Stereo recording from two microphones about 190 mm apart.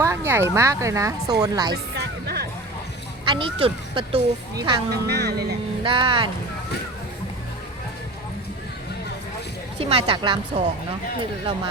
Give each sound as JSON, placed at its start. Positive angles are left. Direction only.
{"t": 0.0, "sound": "a woman's voice", "side_deg": -15}
{"t": 1.7, "sound": "music", "side_deg": -55}
{"t": 3.2, "sound": "speech", "side_deg": -25}
{"t": 4.9, "sound": "speech", "side_deg": -60}
{"t": 5.8, "sound": "speech", "side_deg": -25}
{"t": 9.7, "sound": "speech", "side_deg": -30}